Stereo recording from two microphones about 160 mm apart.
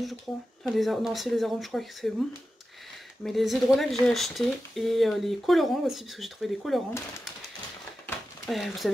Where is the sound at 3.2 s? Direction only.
Centre (ahead or behind).